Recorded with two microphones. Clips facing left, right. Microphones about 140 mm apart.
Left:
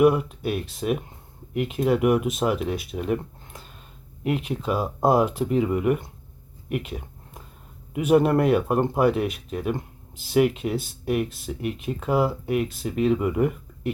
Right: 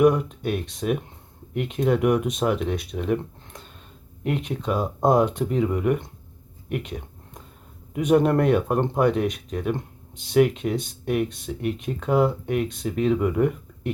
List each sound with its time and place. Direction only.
0.0 s speech: 5° left (ahead or behind)
6.7 s a sound: 5° left (ahead or behind)
7.9 s speech: 5° left (ahead or behind)